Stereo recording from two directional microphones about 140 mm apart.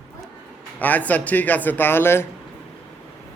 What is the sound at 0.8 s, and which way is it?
Speech, 10° left (ahead or behind).